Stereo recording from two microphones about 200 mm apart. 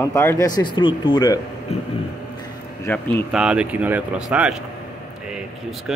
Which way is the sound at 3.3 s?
5° right (ahead or behind).